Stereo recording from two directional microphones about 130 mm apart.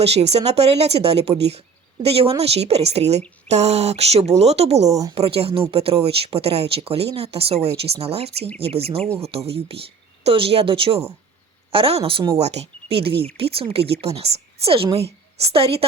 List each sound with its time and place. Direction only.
0.0 s speech: 55° right (ahead or behind)
4.9 s a woman's voice: 25° right (ahead or behind)
5.1 s speech: 50° right (ahead or behind)